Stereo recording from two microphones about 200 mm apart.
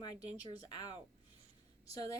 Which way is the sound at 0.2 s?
10° right (ahead or behind).